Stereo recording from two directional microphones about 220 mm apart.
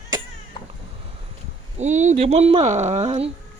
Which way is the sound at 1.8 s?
35° right (ahead or behind).